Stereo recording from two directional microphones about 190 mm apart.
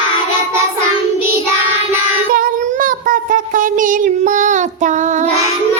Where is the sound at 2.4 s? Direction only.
45° right (ahead or behind).